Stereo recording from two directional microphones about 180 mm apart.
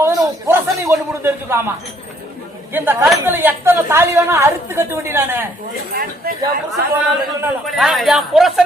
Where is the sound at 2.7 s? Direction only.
10° right (ahead or behind).